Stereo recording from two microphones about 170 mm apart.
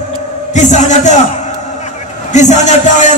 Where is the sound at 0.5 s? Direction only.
45° left (ahead or behind).